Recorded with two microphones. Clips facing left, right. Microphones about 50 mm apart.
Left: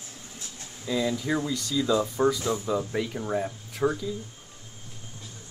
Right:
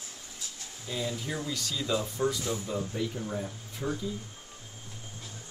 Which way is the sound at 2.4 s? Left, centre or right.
Left.